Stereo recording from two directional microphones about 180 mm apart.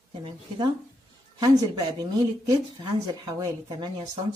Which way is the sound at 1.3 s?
20° right (ahead or behind).